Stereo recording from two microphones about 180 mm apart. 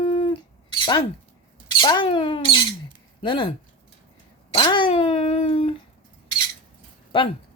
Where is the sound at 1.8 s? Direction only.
25° left (ahead or behind).